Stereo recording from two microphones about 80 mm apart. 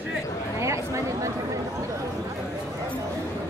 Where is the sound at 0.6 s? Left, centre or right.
Right.